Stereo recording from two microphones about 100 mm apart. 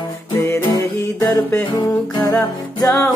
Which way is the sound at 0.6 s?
35° left (ahead or behind).